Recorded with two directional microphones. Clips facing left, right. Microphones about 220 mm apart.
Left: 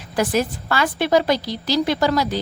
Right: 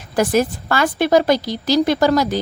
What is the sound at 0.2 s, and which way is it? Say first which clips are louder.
A woman's voice: right 4 dB; 45° right (ahead or behind).